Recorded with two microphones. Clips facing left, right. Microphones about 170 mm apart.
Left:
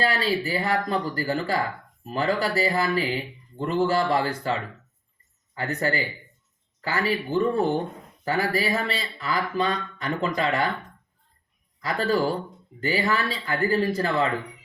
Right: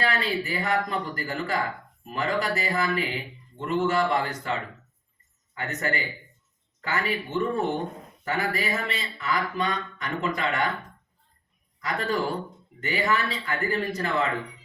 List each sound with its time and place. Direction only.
0.0 s speech: 30° left (ahead or behind)
11.8 s speech: 30° left (ahead or behind)